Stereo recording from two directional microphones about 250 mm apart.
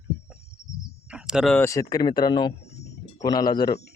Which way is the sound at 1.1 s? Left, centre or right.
Centre.